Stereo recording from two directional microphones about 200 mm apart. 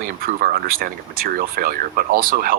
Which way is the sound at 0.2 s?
45° right (ahead or behind).